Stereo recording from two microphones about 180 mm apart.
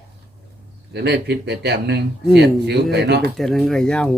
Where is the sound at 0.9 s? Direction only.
65° right (ahead or behind).